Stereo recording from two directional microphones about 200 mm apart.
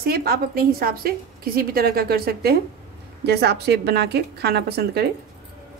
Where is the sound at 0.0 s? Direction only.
50° right (ahead or behind).